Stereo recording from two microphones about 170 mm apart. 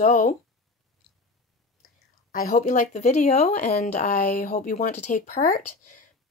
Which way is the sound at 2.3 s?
55° left (ahead or behind).